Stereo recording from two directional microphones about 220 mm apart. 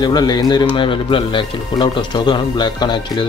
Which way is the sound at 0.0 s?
20° left (ahead or behind).